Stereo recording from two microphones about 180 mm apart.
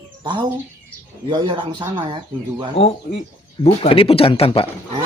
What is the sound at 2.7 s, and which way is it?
Speech, 35° left (ahead or behind).